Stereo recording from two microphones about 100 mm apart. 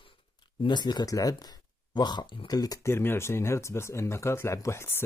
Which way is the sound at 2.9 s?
25° left (ahead or behind).